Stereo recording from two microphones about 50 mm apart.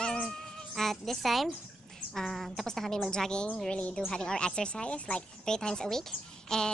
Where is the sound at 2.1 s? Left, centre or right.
Centre; by 5.2 s left.